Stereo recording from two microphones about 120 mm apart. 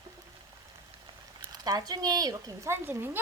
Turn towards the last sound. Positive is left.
turn(degrees=-20)  # may be behind; listen again after turning